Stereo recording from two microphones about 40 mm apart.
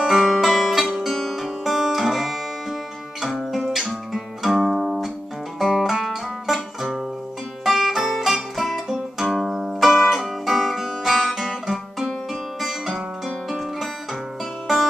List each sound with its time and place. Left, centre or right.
0.0 s music: centre